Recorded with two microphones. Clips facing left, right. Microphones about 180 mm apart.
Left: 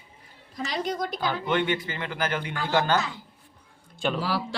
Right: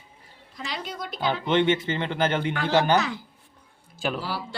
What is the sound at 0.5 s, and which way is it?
Speech, 45° left (ahead or behind).